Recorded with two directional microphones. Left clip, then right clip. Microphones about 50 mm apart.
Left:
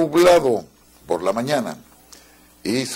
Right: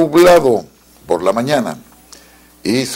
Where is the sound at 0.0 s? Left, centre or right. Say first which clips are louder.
Right 6 dB; left.